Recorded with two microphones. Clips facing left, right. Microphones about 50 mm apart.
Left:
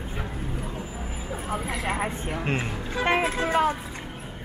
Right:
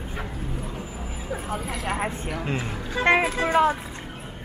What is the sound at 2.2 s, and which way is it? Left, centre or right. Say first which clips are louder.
Speech: left 1 dB; left.